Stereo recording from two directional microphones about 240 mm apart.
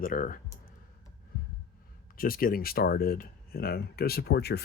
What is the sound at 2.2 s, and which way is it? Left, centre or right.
Speech, left.